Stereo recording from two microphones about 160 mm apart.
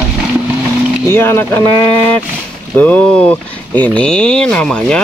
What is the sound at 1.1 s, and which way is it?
Speech, 15° left (ahead or behind).